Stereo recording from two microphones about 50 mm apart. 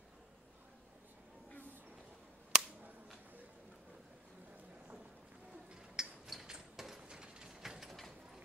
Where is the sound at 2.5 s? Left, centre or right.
Centre.